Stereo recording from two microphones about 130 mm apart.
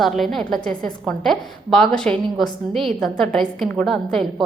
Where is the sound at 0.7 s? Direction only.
90° right.